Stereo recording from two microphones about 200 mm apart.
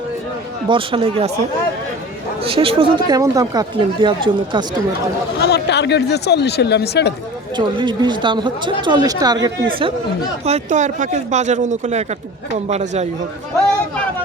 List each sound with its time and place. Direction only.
0.7 s speech: 25° right (ahead or behind)
2.4 s speech: 30° right (ahead or behind)
5.4 s speech: 55° left (ahead or behind)
7.5 s speech: 25° right (ahead or behind)
10.4 s speech: 35° right (ahead or behind)